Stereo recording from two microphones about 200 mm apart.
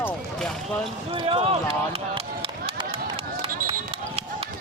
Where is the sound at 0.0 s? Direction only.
5° left (ahead or behind).